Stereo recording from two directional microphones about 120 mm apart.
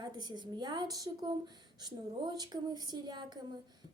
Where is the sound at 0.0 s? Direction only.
35° right (ahead or behind).